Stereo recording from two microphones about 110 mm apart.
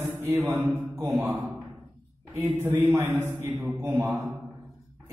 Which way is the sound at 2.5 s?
20° right (ahead or behind).